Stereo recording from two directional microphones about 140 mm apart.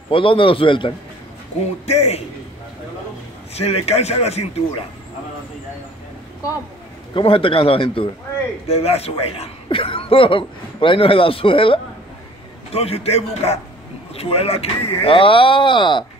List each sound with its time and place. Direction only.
0.1 s a man's voice: 40° left (ahead or behind)
1.9 s speech: 50° left (ahead or behind)
3.5 s speech: 45° left (ahead or behind)
7.2 s a man's voice: 40° left (ahead or behind)